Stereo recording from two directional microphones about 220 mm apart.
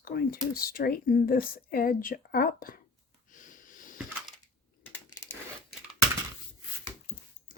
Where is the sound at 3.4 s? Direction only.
35° left (ahead or behind).